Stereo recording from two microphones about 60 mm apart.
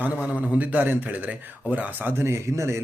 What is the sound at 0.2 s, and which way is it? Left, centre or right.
Speech, right.